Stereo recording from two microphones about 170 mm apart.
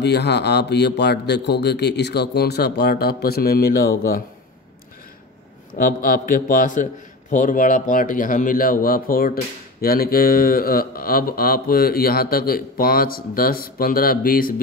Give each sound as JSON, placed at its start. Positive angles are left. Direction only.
{"t": 0.0, "sound": "a man's voice", "side_deg": 85}
{"t": 5.8, "sound": "a man's voice", "side_deg": 55}